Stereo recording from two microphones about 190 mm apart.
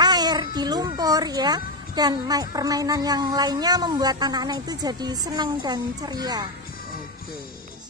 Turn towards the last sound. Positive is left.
turn(degrees=-20)  # may be behind; listen again after turning